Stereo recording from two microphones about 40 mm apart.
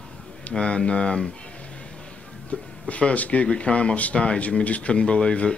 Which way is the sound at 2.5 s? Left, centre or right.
Left.